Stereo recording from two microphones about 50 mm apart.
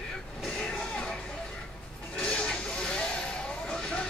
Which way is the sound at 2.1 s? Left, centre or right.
Left.